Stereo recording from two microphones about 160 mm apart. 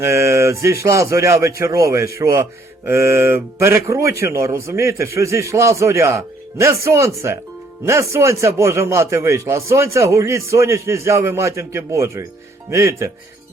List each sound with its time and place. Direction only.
0.0 s a man's voice: 15° right (ahead or behind)